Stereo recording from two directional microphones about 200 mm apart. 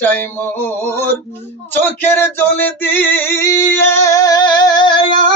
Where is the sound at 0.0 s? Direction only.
10° left (ahead or behind).